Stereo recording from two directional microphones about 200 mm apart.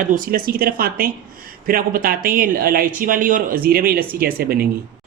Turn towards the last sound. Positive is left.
turn(degrees=-50)  # may be behind; listen again after turning